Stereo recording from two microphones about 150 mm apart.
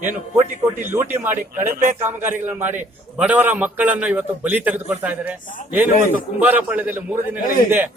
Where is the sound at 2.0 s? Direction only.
15° right (ahead or behind).